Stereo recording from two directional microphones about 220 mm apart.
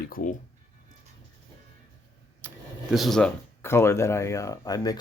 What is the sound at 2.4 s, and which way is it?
Vehicle, 10° right (ahead or behind).